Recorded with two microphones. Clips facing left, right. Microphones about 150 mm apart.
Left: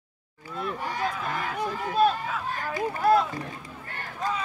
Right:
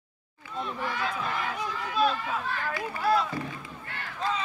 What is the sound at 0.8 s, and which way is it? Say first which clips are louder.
Speech: even; 40° left (ahead or behind).